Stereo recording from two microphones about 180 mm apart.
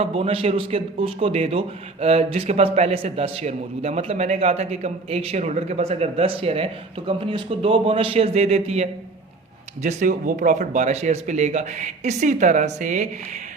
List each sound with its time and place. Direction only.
0.0 s a man's voice: 35° right (ahead or behind)